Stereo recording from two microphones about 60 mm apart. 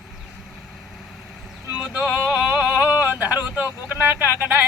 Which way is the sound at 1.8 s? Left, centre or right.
Centre.